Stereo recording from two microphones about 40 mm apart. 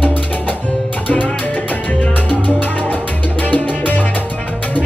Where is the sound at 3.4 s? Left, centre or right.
Left.